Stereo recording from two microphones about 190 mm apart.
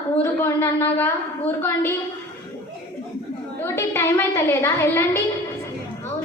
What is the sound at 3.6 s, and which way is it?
A woman's voice, 15° left (ahead or behind).